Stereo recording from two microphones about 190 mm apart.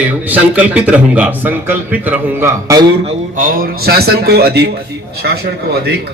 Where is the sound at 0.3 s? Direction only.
5° right (ahead or behind).